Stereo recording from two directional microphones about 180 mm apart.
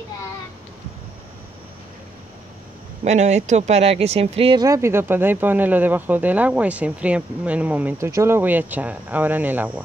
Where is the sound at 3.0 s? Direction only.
40° right (ahead or behind).